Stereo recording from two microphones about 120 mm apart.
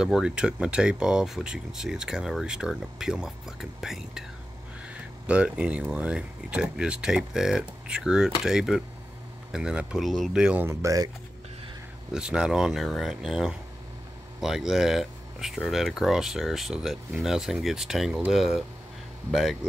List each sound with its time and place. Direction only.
0.0 s speech: 5° right (ahead or behind)
10.7 s speech: 25° right (ahead or behind)
12.1 s speech: 5° right (ahead or behind)